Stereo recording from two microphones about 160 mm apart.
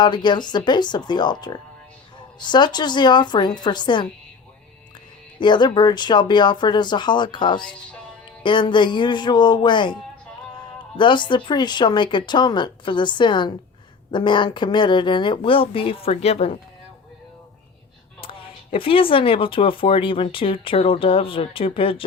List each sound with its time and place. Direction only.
0.0 s speech: 30° left (ahead or behind)
5.4 s speech: 30° left (ahead or behind)
18.2 s speech: 35° left (ahead or behind)